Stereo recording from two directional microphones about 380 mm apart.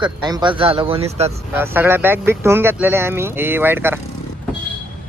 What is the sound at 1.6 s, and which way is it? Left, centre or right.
Speech, centre.